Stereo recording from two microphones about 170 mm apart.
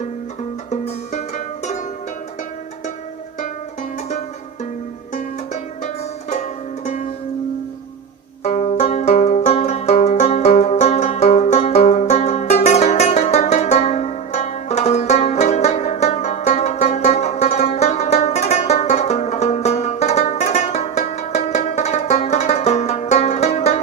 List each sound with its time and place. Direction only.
0.7 s music: 45° left (ahead or behind)
5.8 s music: 40° left (ahead or behind)
8.4 s banjo: 40° left (ahead or behind)